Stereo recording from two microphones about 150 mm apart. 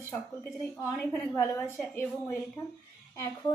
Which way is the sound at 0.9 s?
20° left (ahead or behind).